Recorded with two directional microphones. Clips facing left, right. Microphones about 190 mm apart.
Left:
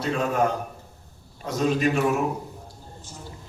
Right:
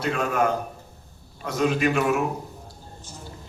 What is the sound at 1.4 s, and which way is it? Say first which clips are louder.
Speech: even; 35° left (ahead or behind).